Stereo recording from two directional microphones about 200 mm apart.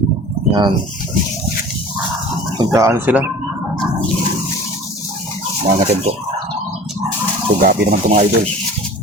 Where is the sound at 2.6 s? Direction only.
15° right (ahead or behind).